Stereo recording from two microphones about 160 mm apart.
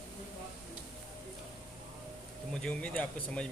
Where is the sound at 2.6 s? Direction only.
10° left (ahead or behind).